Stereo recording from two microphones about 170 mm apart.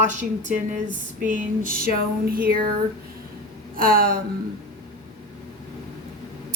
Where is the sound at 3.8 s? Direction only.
60° right (ahead or behind).